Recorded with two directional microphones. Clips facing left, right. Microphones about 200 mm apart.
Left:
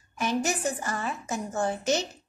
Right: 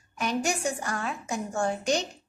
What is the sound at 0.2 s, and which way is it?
A woman's voice, centre (ahead or behind).